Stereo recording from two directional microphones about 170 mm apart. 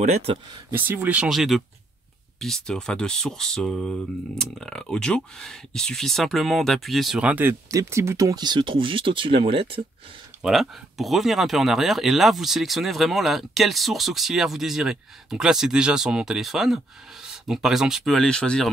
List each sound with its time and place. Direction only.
0.0 s speech: 40° right (ahead or behind)
0.7 s speech: 10° right (ahead or behind); by 9.8 s 30° right (ahead or behind)
10.4 s speech: centre (ahead or behind)